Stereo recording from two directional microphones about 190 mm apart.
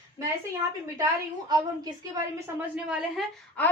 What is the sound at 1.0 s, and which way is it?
Speech, 20° right (ahead or behind).